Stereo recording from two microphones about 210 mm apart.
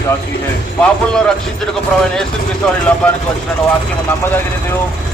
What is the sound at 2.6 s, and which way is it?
Speech, 5° left (ahead or behind).